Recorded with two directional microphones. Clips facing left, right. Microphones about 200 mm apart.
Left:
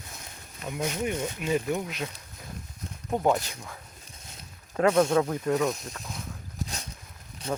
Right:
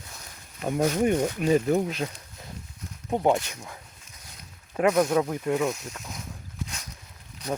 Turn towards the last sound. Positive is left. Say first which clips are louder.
# right 1 dB
turn(degrees=25)  # may be behind; listen again after turning